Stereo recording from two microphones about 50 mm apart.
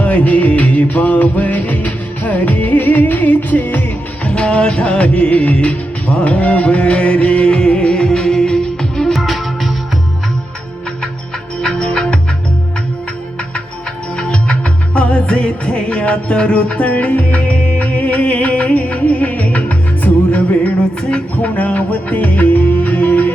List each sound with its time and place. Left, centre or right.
0.0 s music: left; by 9.2 s centre
9.2 s music: centre
11.6 s music: centre
14.2 s music: centre; by 23.3 s left